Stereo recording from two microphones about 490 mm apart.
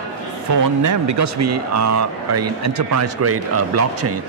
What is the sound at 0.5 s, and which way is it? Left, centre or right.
Speech, right.